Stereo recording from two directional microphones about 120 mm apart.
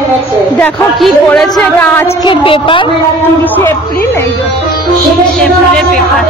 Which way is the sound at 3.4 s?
15° left (ahead or behind).